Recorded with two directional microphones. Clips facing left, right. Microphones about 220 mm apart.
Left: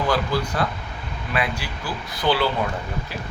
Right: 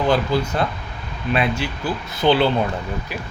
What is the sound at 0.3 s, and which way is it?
Speech, 25° right (ahead or behind).